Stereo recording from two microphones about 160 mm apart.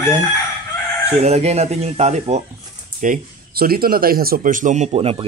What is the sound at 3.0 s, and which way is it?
A man's voice, 60° right (ahead or behind).